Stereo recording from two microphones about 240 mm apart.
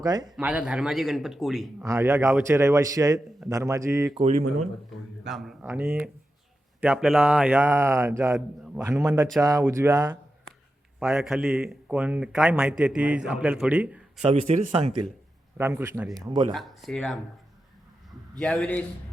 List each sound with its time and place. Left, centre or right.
0.0 s a man's voice: centre
0.3 s a man's voice: centre
1.8 s a man's voice: centre
4.2 s speech: right
5.3 s a man's voice: centre
11.0 s a man's voice: centre
14.5 s speech: right
15.5 s a man's voice: centre
16.5 s a man's voice: centre
18.3 s a man's voice: centre